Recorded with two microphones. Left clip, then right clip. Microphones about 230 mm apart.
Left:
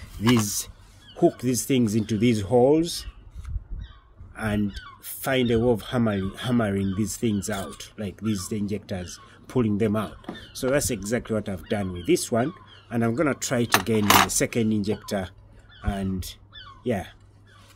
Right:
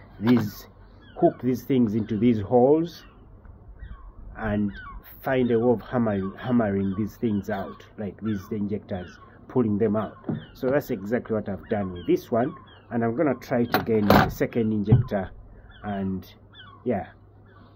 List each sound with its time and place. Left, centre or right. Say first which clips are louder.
0.4 s speech: left 4 dB; left
4.4 s speech: even; left
16.5 s a sound: right 1 dB; left